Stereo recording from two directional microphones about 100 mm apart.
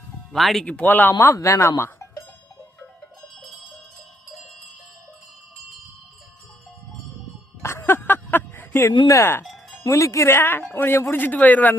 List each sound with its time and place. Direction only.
0.3 s speech: centre (ahead or behind)
0.7 s speech: 15° left (ahead or behind)
1.2 s speech: 30° left (ahead or behind)
7.6 s a sound: 25° left (ahead or behind)
9.0 s speech: 30° left (ahead or behind)
9.4 s cowbell: 5° left (ahead or behind)
9.8 s speech: 30° left (ahead or behind); by 11.8 s 15° left (ahead or behind)